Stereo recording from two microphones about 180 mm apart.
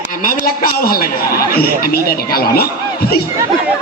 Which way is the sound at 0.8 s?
55° left (ahead or behind).